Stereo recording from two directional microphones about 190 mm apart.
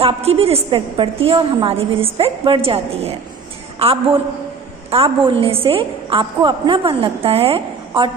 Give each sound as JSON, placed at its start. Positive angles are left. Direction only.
{"t": 0.0, "sound": "a woman's voice", "side_deg": -30}
{"t": 4.9, "sound": "a woman's voice", "side_deg": -30}